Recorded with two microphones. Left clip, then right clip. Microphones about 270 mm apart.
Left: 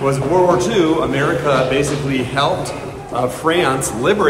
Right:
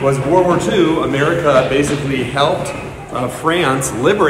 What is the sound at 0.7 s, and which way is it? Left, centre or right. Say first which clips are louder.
Speech: right 1 dB; centre.